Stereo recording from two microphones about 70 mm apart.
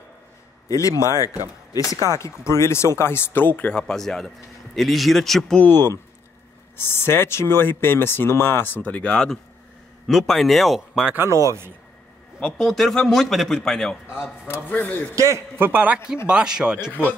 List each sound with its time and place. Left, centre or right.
0.7 s speech: left
3.8 s a man's voice: centre
5.6 s a man's voice: left; by 11.1 s centre
11.1 s speech: right
12.4 s a man's voice: centre
14.5 s speech: left
15.1 s speech: right
15.6 s a man's voice: right
16.3 s speech: centre